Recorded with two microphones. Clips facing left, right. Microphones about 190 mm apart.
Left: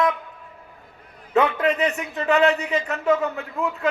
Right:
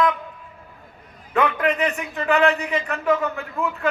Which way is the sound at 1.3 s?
25° left (ahead or behind).